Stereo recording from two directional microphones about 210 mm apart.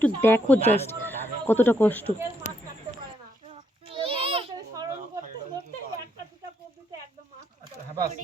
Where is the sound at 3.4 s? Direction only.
30° right (ahead or behind).